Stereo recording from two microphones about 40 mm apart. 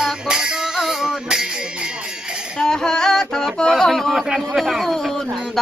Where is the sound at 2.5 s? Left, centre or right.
Centre.